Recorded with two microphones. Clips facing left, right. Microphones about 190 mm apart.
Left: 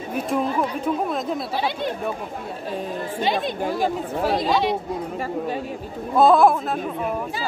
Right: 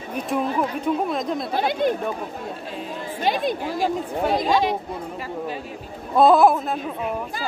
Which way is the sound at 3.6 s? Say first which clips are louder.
Left 1 dB; 50° left (ahead or behind).